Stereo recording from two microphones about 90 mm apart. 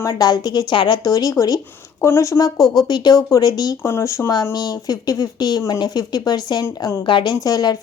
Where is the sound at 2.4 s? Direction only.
45° left (ahead or behind).